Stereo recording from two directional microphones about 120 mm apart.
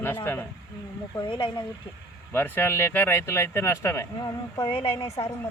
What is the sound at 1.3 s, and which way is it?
Speech, 45° left (ahead or behind).